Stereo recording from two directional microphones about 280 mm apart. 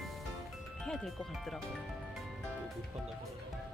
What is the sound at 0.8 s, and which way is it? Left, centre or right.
Speech, centre.